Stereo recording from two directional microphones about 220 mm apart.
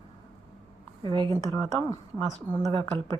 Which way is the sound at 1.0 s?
20° right (ahead or behind).